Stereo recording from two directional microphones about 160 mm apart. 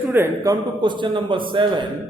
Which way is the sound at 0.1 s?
15° right (ahead or behind).